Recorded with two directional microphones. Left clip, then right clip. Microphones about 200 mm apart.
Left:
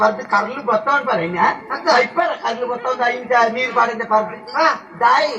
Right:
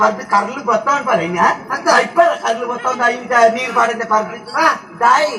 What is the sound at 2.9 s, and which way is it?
A man's voice, 40° right (ahead or behind).